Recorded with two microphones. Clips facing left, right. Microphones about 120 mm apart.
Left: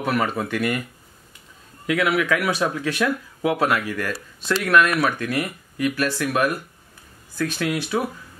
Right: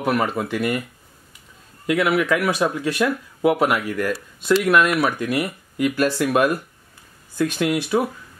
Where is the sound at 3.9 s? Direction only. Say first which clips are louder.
Right 4 dB; 15° right (ahead or behind).